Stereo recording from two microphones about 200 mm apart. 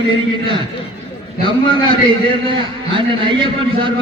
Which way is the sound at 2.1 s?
25° right (ahead or behind).